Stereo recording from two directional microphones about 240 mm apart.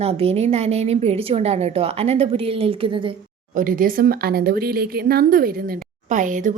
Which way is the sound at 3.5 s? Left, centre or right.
Right.